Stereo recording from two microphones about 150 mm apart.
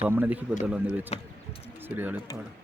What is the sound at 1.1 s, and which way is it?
Speech, 45° left (ahead or behind).